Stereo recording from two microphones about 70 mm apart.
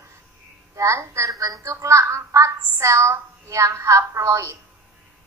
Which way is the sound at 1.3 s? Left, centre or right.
Right.